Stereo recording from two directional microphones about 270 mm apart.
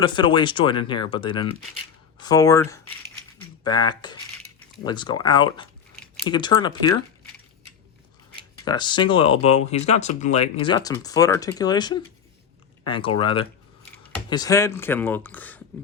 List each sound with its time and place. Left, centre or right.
0.0 s speech: centre
8.6 s speech: centre